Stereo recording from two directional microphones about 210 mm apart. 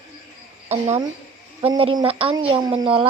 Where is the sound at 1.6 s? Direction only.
25° right (ahead or behind).